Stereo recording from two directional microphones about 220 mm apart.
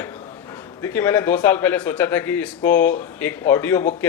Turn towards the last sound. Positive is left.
turn(degrees=10)  # may be behind; listen again after turning